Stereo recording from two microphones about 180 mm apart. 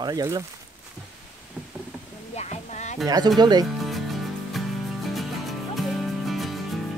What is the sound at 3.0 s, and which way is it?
Speech, 20° right (ahead or behind).